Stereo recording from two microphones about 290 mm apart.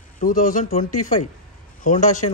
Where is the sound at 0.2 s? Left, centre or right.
Left.